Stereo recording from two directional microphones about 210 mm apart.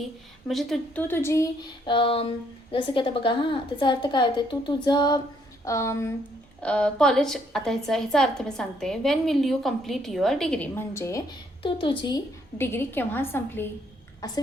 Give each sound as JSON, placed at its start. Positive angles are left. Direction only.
{"t": 0.4, "sound": "a woman's voice", "side_deg": 0}
{"t": 1.9, "sound": "a woman's voice", "side_deg": 25}
{"t": 11.6, "sound": "a woman's voice", "side_deg": 25}